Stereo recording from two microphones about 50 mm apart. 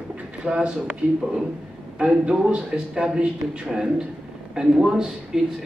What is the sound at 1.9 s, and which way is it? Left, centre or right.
Speech, centre.